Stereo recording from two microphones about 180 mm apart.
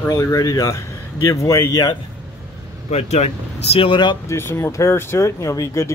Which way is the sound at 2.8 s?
35° left (ahead or behind).